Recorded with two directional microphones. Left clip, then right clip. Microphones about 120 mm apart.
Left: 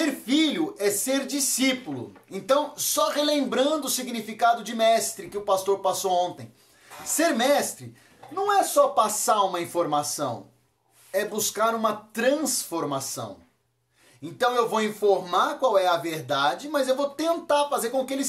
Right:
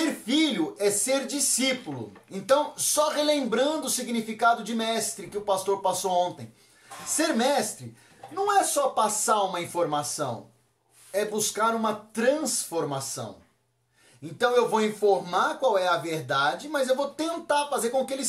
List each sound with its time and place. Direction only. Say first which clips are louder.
0.0 s a sound: left 1 dB; 25° left (ahead or behind)
2.3 s a woman's voice: even; 30° left (ahead or behind)
8.9 s speech: left 2 dB; 35° left (ahead or behind)
14.4 s speech: even; 35° left (ahead or behind)